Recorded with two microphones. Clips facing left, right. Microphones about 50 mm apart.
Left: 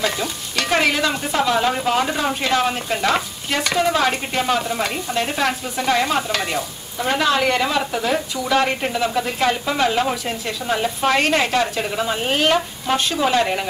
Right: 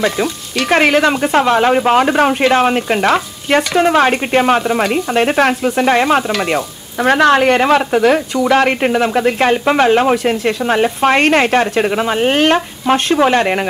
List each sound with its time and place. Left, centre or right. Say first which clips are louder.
0.7 s speech: right 7 dB; right
7.0 s speech: right 8 dB; right